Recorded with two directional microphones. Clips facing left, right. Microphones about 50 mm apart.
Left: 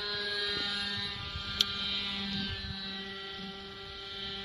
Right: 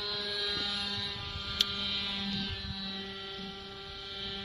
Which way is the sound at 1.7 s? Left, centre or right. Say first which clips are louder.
Even; centre.